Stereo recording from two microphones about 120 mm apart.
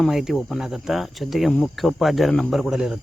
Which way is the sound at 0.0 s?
5° right (ahead or behind).